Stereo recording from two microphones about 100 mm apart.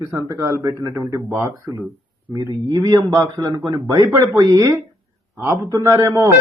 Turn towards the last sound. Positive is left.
turn(degrees=-30)  # may be behind; listen again after turning